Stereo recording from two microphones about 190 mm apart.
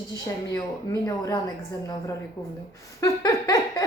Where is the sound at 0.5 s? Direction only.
15° left (ahead or behind).